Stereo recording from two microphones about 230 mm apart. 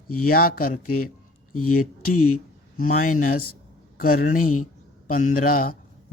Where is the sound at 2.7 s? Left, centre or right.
Left.